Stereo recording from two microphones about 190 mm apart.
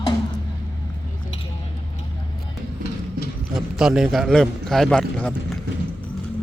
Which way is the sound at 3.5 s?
5° right (ahead or behind).